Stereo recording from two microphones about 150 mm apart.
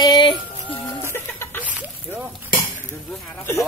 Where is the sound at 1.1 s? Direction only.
15° left (ahead or behind).